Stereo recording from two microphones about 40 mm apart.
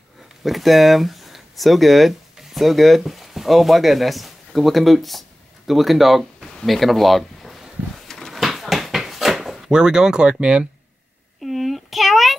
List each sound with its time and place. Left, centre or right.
0.4 s speech: centre
2.3 s a sound: centre
3.0 s speech: centre
8.3 s a sound: centre
9.7 s speech: centre
11.4 s child singing: centre